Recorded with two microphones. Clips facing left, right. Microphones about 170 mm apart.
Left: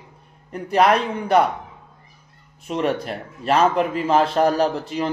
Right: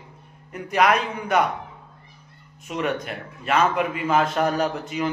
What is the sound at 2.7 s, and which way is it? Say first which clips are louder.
A man's voice: left 4 dB; 35° left (ahead or behind).